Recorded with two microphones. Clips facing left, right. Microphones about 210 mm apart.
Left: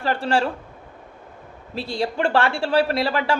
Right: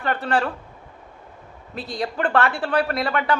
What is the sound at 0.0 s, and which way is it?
Speech, 30° left (ahead or behind).